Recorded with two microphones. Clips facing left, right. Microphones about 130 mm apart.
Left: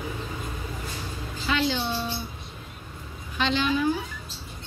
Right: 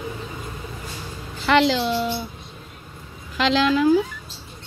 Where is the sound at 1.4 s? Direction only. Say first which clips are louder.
Right 8 dB; 80° right.